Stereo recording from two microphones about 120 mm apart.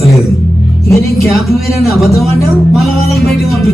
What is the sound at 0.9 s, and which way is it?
Music, 25° left (ahead or behind).